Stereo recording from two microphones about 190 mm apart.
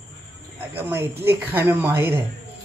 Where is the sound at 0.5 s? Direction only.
10° right (ahead or behind).